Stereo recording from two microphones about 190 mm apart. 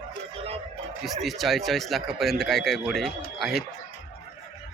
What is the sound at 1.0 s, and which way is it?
Speech, centre (ahead or behind).